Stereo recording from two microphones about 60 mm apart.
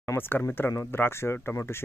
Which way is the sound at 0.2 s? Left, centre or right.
Left.